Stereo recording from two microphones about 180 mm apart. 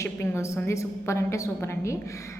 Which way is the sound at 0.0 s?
15° left (ahead or behind).